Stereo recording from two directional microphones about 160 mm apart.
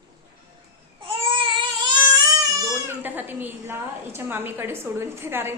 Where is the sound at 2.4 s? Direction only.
15° right (ahead or behind).